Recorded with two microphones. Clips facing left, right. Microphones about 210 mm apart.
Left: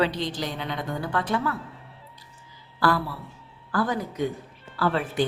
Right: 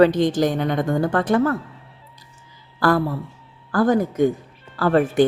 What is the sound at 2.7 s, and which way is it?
A woman's voice, 45° right (ahead or behind).